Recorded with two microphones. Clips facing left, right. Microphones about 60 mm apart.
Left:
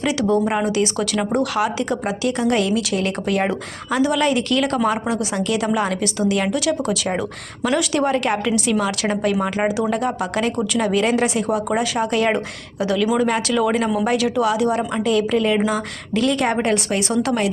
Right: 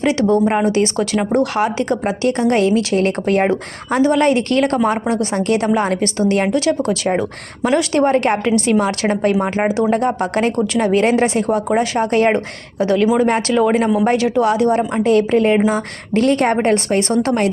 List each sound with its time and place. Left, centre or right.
0.0 s a woman's voice: right
5.4 s a woman's voice: right
5.7 s a woman's voice: right
8.7 s a woman's voice: right
10.2 s a woman's voice: right